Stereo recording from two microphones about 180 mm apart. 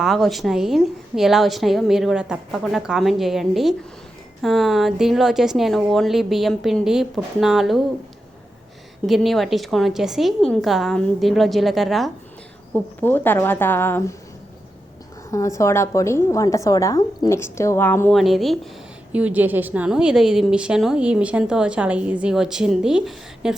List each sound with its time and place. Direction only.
0.0 s a woman's voice: centre (ahead or behind)
9.0 s a woman's voice: centre (ahead or behind)
12.7 s a woman's voice: 10° left (ahead or behind)
15.3 s a woman's voice: 15° left (ahead or behind)
18.2 s a woman's voice: centre (ahead or behind)